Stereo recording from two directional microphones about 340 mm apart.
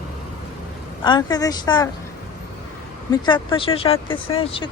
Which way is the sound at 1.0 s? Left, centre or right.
Centre.